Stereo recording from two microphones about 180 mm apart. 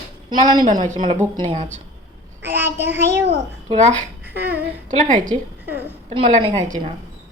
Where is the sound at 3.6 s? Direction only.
40° right (ahead or behind).